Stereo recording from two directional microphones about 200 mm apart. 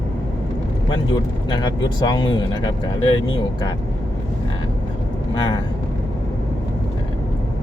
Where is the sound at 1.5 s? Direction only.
20° left (ahead or behind).